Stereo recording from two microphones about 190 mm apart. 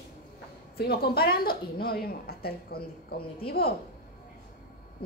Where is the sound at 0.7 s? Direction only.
55° left (ahead or behind).